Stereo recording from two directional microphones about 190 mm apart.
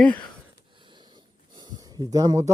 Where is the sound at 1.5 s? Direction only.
20° right (ahead or behind).